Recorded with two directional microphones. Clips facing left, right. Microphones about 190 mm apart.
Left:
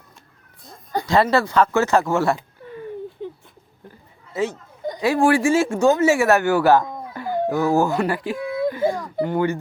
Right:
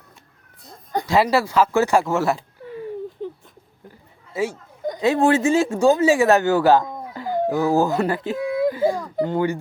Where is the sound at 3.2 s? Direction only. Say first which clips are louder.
Right 1 dB; 40° right (ahead or behind).